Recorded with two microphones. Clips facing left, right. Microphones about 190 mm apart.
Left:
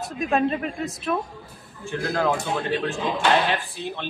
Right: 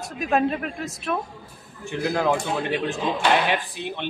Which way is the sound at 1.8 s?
20° right (ahead or behind).